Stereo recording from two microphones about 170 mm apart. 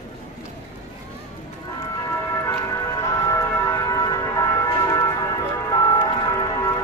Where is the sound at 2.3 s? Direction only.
20° left (ahead or behind).